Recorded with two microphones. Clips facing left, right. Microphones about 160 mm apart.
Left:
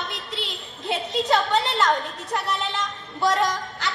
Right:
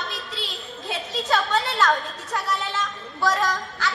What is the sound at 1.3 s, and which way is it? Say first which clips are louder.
Speech: left 1 dB; 20° left (ahead or behind).